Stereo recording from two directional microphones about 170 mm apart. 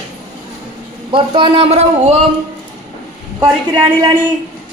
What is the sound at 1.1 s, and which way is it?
A woman's voice, 30° right (ahead or behind).